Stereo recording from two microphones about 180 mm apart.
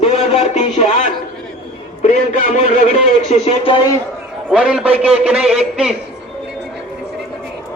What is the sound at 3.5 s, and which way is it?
Speech, 30° left (ahead or behind).